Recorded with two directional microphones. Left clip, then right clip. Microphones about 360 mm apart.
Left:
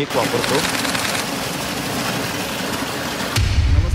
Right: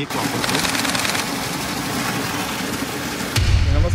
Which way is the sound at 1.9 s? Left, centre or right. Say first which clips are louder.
Even; centre.